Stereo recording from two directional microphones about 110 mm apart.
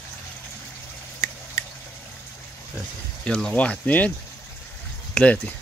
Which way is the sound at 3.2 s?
5° left (ahead or behind).